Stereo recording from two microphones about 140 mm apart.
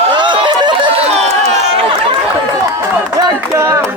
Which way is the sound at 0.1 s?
35° right (ahead or behind).